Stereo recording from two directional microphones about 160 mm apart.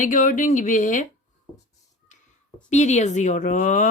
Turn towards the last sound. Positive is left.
turn(degrees=55)  # may be behind; listen again after turning